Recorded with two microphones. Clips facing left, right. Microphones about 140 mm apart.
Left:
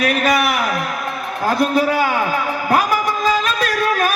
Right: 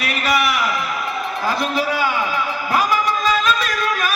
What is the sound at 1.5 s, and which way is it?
Speech, 50° left (ahead or behind).